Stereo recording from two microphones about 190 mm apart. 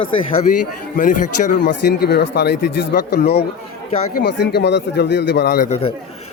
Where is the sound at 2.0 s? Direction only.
60° left (ahead or behind).